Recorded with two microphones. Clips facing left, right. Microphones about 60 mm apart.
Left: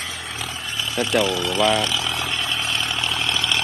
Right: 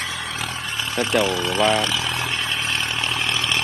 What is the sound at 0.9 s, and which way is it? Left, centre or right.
Speech, right.